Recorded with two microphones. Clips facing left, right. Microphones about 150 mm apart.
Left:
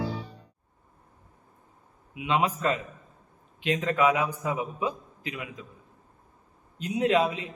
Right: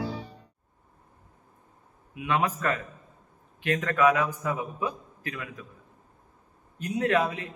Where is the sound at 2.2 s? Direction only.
20° left (ahead or behind).